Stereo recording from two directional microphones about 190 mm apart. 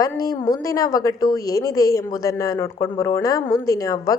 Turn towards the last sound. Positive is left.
turn(degrees=15)  # may be behind; listen again after turning